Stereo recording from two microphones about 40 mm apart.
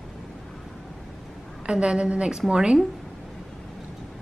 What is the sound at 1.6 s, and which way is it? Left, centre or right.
A woman's voice, right.